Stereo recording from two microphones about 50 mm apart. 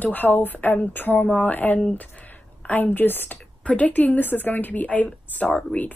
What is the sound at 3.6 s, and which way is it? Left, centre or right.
A woman's voice, left.